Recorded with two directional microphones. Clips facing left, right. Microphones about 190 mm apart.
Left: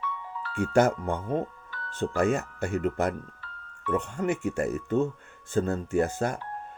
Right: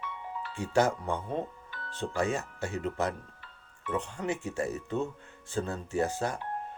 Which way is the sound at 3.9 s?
50° left (ahead or behind).